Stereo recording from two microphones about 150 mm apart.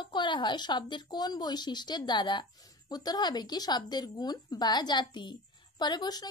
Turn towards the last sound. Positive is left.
turn(degrees=25)  # may be behind; listen again after turning